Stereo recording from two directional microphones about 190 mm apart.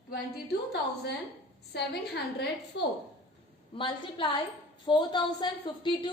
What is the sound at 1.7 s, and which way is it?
A woman's voice, 60° left (ahead or behind).